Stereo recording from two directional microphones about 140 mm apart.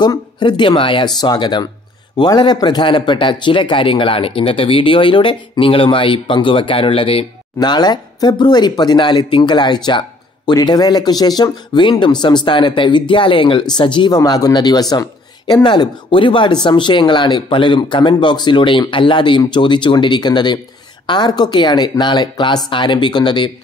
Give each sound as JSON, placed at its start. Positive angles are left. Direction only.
{"t": 0.0, "sound": "speech", "side_deg": 30}
{"t": 7.5, "sound": "speech", "side_deg": 30}